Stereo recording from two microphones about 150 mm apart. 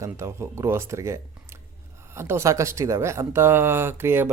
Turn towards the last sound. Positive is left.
turn(degrees=-15)  # may be behind; listen again after turning